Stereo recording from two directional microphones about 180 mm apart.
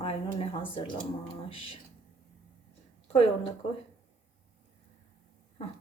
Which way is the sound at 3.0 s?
35° left (ahead or behind).